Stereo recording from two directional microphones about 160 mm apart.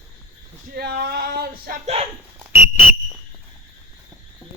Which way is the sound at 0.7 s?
85° right.